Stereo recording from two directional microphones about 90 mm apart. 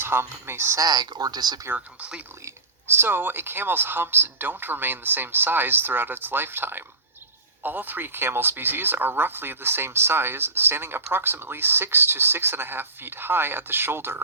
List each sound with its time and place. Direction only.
0.0 s speech: 25° right (ahead or behind)
0.8 s speech: 45° right (ahead or behind)
1.7 s speech: 15° right (ahead or behind)
2.4 s speech: 25° right (ahead or behind)